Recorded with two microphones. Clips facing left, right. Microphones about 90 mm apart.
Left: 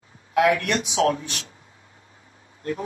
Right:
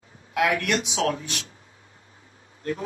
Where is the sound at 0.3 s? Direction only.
35° left (ahead or behind).